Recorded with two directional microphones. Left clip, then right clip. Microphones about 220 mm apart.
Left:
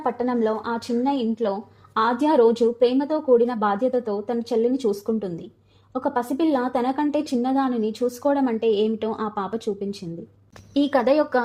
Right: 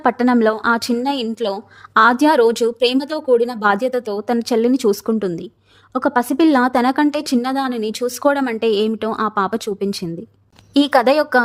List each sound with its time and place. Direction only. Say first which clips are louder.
0.0 s a woman's voice: right 8 dB; 45° right (ahead or behind)